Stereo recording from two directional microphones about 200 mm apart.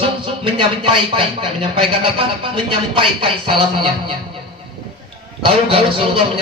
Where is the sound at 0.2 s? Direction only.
25° right (ahead or behind).